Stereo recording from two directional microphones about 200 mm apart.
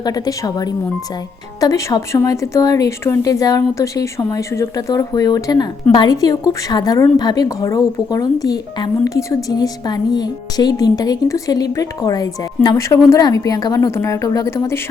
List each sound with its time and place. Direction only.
0.0 s a woman's voice: 20° left (ahead or behind)